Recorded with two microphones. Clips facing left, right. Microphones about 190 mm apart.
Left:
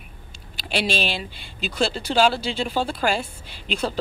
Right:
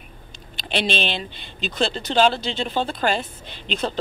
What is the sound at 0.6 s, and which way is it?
Speech, 5° left (ahead or behind).